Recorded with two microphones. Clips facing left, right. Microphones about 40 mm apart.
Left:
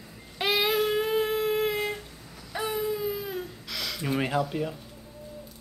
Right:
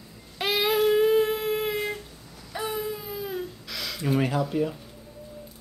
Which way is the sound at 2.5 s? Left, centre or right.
Centre.